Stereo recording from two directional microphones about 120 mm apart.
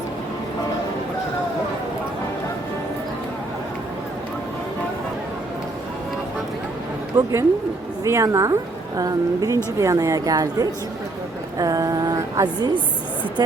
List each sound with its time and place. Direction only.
7.2 s a woman's voice: 30° right (ahead or behind)